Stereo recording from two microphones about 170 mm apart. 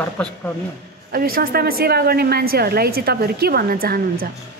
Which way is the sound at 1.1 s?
60° right (ahead or behind).